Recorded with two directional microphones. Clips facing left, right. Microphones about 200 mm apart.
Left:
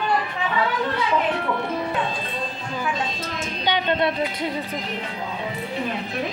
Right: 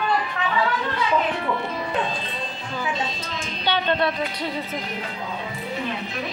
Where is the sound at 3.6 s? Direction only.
15° left (ahead or behind).